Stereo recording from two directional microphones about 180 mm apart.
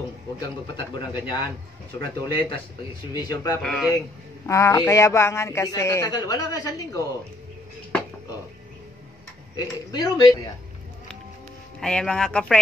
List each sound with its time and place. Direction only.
0.4 s a man's voice: 25° left (ahead or behind)
3.6 s speech: 5° left (ahead or behind)
4.5 s speech: 15° left (ahead or behind)
9.6 s a man's voice: 20° left (ahead or behind)
11.8 s speech: 5° left (ahead or behind)